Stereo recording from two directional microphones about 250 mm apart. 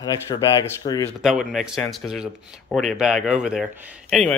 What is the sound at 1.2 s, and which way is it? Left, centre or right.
Speech, centre.